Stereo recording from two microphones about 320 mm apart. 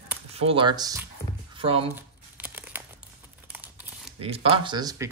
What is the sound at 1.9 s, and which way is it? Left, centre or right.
Crumpling, centre.